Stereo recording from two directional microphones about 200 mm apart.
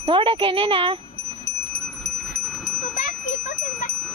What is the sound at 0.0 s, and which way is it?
Speech, 25° right (ahead or behind).